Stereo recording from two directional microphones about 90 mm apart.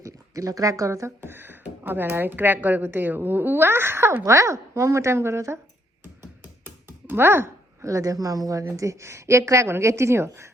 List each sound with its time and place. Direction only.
0.0 s speech: 40° right (ahead or behind)
4.1 s a woman's voice: 35° right (ahead or behind)